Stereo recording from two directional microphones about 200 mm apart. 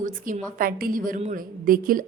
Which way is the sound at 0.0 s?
40° right (ahead or behind).